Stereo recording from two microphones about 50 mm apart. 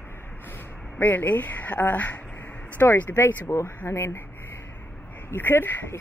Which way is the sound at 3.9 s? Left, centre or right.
Left.